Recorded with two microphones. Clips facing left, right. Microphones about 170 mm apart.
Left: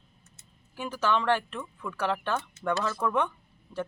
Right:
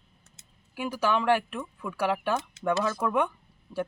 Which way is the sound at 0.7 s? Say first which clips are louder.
Right 1 dB; 10° right (ahead or behind).